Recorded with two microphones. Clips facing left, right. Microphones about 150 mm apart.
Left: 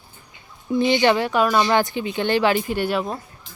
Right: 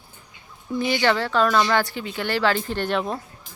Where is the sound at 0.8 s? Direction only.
20° left (ahead or behind).